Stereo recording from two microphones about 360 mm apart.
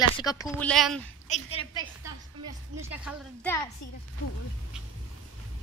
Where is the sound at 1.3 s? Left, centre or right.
Centre.